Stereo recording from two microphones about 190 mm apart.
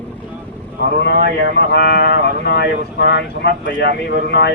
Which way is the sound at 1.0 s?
60° left (ahead or behind).